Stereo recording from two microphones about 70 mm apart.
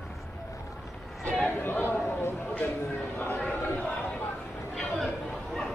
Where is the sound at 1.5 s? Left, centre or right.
Left.